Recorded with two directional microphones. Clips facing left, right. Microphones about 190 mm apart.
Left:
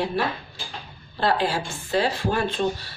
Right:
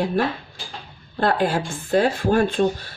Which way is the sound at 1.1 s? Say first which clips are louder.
Right 3 dB; 50° right (ahead or behind).